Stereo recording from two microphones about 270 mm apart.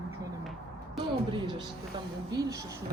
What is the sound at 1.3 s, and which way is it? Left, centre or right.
Music, centre.